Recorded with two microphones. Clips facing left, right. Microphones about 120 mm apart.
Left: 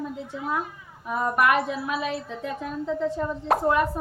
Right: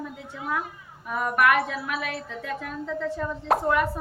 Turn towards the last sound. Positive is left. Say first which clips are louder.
# left 1 dB
turn(degrees=0)  # may be behind; listen again after turning